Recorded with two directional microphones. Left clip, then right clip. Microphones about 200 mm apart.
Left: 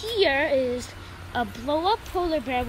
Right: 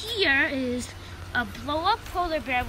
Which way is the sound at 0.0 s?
10° left (ahead or behind).